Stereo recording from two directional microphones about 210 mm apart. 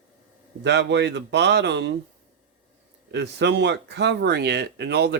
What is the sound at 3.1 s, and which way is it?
Speech, 55° right (ahead or behind).